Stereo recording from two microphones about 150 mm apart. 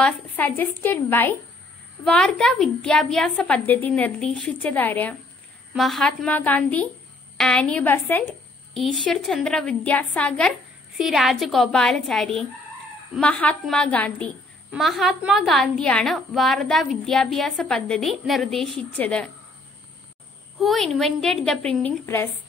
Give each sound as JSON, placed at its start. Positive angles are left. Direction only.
{"t": 0.0, "sound": "a woman's voice", "side_deg": 10}
{"t": 8.7, "sound": "a woman's voice", "side_deg": 0}
{"t": 11.0, "sound": "a woman's voice", "side_deg": 0}
{"t": 20.5, "sound": "a woman's voice", "side_deg": 0}
{"t": 22.0, "sound": "a woman's voice", "side_deg": 15}